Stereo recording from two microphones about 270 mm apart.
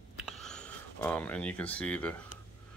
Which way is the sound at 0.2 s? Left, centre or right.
Centre.